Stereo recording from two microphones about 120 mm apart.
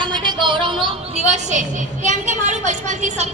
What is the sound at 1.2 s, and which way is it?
A woman's voice, 70° right (ahead or behind).